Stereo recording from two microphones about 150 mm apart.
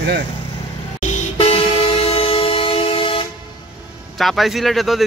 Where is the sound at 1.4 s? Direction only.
40° left (ahead or behind).